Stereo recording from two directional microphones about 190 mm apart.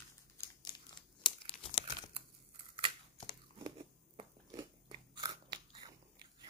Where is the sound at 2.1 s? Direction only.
30° right (ahead or behind).